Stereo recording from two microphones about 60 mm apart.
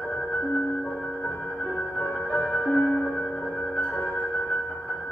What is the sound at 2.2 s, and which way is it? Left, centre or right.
Music, left.